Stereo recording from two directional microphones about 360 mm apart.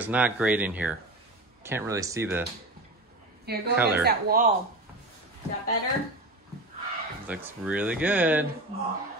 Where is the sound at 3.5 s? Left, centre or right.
Right.